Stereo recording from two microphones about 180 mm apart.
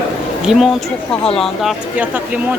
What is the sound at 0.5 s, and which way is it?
A man's voice, 5° right (ahead or behind).